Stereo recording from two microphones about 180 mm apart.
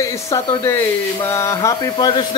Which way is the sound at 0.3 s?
15° left (ahead or behind).